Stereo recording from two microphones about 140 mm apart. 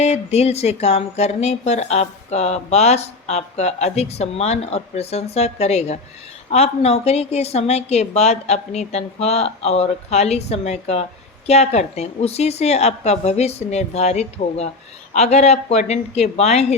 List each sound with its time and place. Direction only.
0.0 s speech: 50° left (ahead or behind)